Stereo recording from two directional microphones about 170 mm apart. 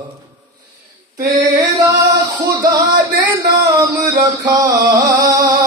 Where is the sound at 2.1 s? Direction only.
20° right (ahead or behind).